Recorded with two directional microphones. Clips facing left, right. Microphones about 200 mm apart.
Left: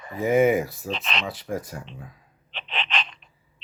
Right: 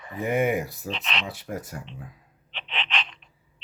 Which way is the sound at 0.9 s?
40° left (ahead or behind).